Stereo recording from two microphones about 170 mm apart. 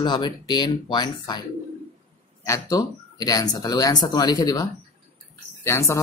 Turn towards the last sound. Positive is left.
turn(degrees=15)  # may be behind; listen again after turning